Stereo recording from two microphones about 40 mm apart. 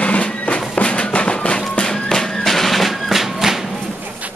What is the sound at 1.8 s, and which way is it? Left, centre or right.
Music, centre.